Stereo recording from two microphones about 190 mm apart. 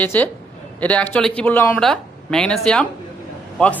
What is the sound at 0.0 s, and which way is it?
A woman's voice, 10° left (ahead or behind).